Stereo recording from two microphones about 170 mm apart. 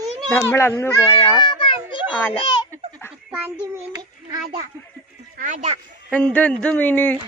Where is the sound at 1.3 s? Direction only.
30° left (ahead or behind).